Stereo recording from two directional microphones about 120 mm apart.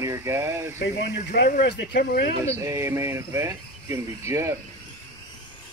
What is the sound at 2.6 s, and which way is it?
Speech, 25° right (ahead or behind).